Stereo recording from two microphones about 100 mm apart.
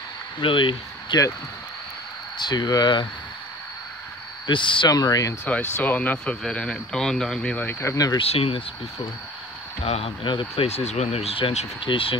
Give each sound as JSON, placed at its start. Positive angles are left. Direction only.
{"t": 0.4, "sound": "speech", "side_deg": 60}
{"t": 1.1, "sound": "speech", "side_deg": 45}
{"t": 2.3, "sound": "speech", "side_deg": 45}
{"t": 4.5, "sound": "speech", "side_deg": 55}
{"t": 4.8, "sound": "speech", "side_deg": 40}
{"t": 5.4, "sound": "speech", "side_deg": 15}
{"t": 7.8, "sound": "speech", "side_deg": 35}
{"t": 8.2, "sound": "speech", "side_deg": 75}
{"t": 9.8, "sound": "speech", "side_deg": 90}